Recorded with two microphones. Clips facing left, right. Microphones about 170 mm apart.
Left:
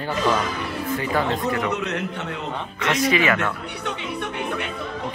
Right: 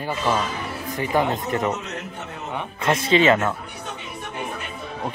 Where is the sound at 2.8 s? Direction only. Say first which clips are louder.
Right 2 dB; 25° right (ahead or behind).